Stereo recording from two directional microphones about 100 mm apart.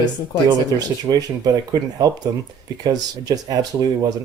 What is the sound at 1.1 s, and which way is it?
Speech, 35° right (ahead or behind).